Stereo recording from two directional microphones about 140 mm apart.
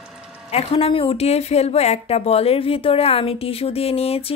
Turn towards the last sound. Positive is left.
turn(degrees=45)  # may be behind; listen again after turning